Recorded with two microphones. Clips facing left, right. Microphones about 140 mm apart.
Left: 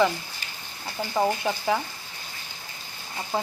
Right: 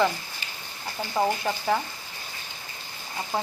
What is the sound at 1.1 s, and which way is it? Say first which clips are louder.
Speech: left 1 dB; centre (ahead or behind).